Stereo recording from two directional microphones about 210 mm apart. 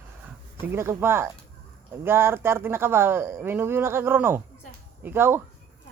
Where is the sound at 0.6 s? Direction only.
10° right (ahead or behind).